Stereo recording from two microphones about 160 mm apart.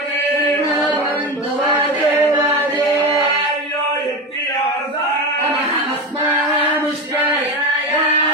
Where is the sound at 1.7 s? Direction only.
15° right (ahead or behind).